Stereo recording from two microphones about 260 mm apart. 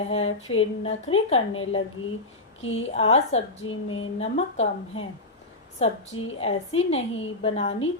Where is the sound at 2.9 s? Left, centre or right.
Left.